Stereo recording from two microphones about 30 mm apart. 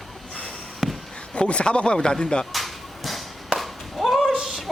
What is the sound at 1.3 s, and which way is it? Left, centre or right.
Speech, left.